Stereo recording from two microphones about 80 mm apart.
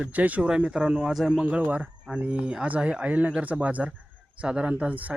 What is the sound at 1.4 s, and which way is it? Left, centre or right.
Speech, centre.